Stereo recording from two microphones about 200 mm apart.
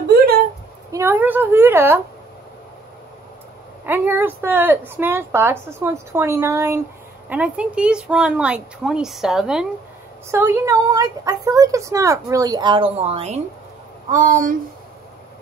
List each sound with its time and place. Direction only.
0.9 s a woman's voice: 10° right (ahead or behind)
3.8 s a woman's voice: 10° right (ahead or behind); by 13.4 s 30° right (ahead or behind)
14.1 s speech: 40° right (ahead or behind)